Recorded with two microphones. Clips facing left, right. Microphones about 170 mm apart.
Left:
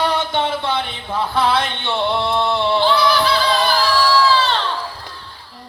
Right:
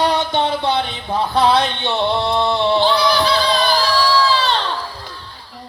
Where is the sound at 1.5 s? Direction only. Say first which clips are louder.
Right 2 dB; 15° right (ahead or behind).